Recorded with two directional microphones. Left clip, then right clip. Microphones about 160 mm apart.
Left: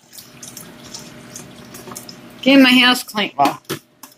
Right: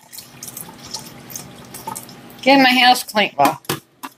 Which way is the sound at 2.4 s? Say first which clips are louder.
Even; 5° left (ahead or behind).